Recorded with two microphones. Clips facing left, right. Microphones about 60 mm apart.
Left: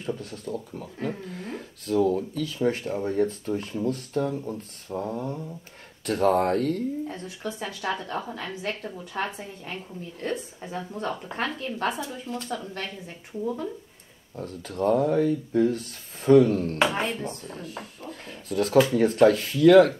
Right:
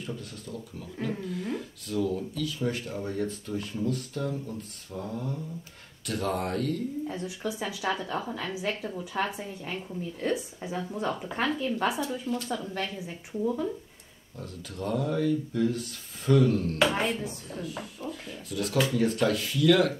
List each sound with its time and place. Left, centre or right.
0.0 s speech: left
6.0 s speech: left
7.1 s a woman's voice: centre
14.3 s speech: left
17.1 s a woman's voice: centre
17.5 s speech: left